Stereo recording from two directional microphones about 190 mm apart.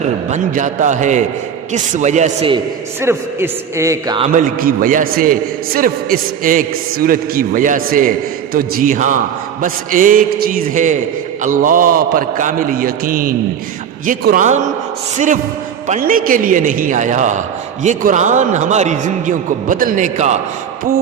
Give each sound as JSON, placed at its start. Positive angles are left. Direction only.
{"t": 0.3, "sound": "a man's voice", "side_deg": -40}
{"t": 3.0, "sound": "a man's voice", "side_deg": -10}
{"t": 4.2, "sound": "a man's voice", "side_deg": -45}
{"t": 15.9, "sound": "a man's voice", "side_deg": -45}